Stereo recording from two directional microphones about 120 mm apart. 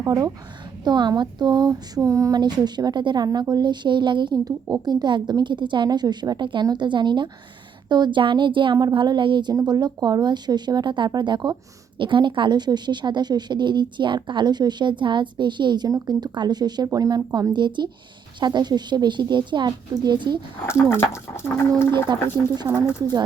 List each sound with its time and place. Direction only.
0.0 s speech: 25° right (ahead or behind)
20.7 s speech: 20° left (ahead or behind)
21.9 s speech: 35° right (ahead or behind)